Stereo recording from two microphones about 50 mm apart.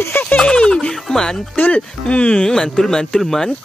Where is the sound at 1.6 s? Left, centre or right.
Left; by 3.5 s centre.